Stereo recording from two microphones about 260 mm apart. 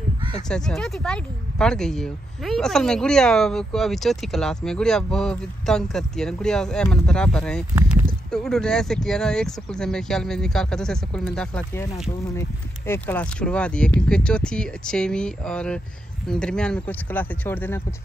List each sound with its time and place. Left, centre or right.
0.5 s speech: centre